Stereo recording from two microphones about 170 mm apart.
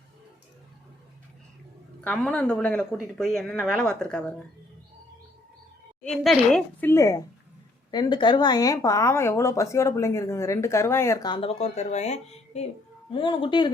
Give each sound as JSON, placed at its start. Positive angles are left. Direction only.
{"t": 2.0, "sound": "a woman's voice", "side_deg": 10}
{"t": 6.0, "sound": "a woman's voice", "side_deg": 5}
{"t": 13.1, "sound": "speech", "side_deg": 30}